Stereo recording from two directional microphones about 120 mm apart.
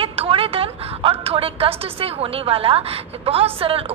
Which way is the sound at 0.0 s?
50° right (ahead or behind).